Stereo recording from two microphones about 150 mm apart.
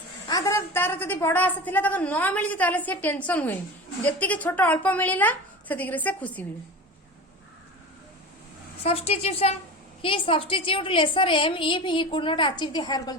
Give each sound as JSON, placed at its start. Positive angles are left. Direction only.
{"t": 0.3, "sound": "a woman's voice", "side_deg": 25}
{"t": 8.8, "sound": "a woman's voice", "side_deg": 40}